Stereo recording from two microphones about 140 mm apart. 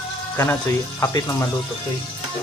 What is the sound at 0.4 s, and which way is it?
Speech, 15° left (ahead or behind).